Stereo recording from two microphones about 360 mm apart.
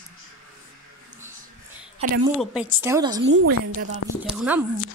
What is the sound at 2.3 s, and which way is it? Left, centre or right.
Speech, centre.